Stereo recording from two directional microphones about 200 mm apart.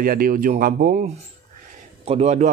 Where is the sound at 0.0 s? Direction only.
45° right (ahead or behind).